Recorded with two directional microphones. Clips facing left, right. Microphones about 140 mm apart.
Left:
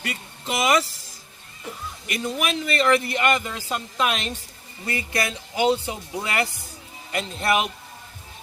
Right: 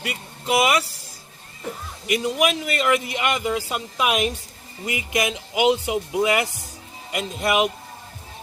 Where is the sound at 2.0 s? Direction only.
15° right (ahead or behind).